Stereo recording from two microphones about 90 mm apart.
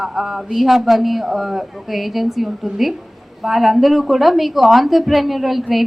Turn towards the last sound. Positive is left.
turn(degrees=0)  # may be behind; listen again after turning